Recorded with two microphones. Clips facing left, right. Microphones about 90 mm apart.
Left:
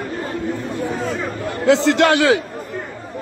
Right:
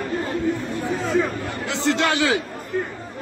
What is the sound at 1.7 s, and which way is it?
Speech, 90° left.